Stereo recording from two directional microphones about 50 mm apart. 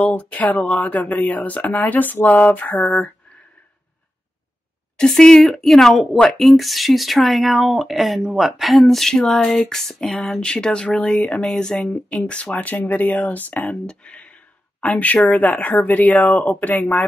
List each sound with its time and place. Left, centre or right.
0.3 s speech: left
4.9 s speech: centre
6.4 s speech: centre; by 11.2 s left
11.4 s speech: centre
11.8 s speech: left
13.7 s speech: left